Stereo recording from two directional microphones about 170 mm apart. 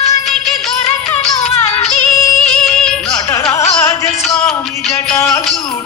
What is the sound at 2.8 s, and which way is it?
Music, centre (ahead or behind).